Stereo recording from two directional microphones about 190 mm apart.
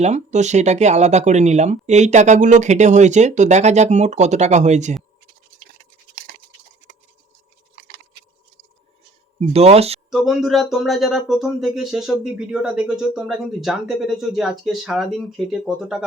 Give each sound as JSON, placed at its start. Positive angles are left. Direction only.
{"t": 0.0, "sound": "speech", "side_deg": -35}
{"t": 9.4, "sound": "speech", "side_deg": -35}
{"t": 10.1, "sound": "speech", "side_deg": 0}